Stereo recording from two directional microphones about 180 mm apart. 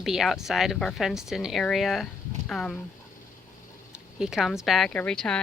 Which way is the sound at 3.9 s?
5° right (ahead or behind).